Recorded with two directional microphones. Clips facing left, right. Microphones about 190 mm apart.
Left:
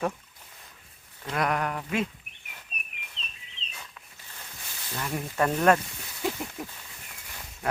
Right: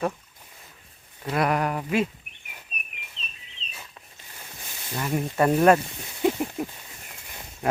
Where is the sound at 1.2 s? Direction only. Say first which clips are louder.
Right 4 dB; 10° right (ahead or behind).